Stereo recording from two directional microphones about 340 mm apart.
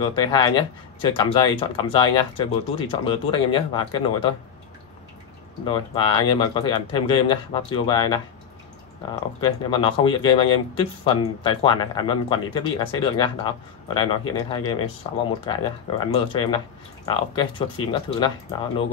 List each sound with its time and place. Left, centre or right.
0.0 s speech: centre
5.7 s speech: centre
16.1 s speech: centre